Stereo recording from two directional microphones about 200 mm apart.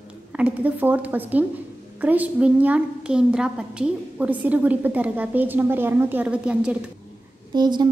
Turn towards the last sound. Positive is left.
turn(degrees=-20)  # may be behind; listen again after turning